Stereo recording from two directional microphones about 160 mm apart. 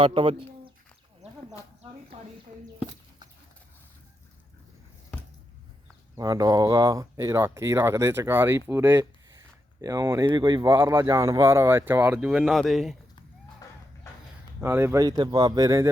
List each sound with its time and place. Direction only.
0.0 s speech: 35° right (ahead or behind)
1.2 s a sound: 45° right (ahead or behind)
6.1 s speech: 20° right (ahead or behind)
10.8 s speech: 20° right (ahead or behind); by 13.0 s centre (ahead or behind)
13.6 s music: 20° left (ahead or behind)
14.6 s speech: 15° right (ahead or behind)